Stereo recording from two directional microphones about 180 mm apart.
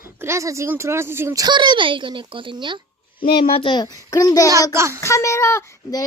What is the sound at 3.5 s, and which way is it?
Speech, 30° left (ahead or behind).